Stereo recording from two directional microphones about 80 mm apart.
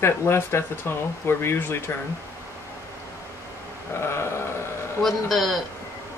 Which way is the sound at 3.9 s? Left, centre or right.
Left.